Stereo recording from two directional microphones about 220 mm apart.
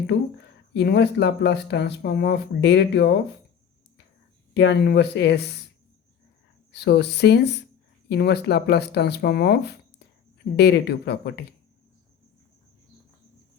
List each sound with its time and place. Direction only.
0.1 s speech: 50° left (ahead or behind)
4.5 s speech: 50° left (ahead or behind)
6.7 s speech: 50° left (ahead or behind)